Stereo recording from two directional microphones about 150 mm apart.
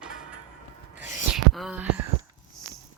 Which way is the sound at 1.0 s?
10° right (ahead or behind).